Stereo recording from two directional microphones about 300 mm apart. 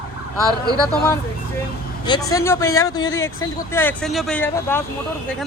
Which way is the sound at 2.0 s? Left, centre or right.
Centre.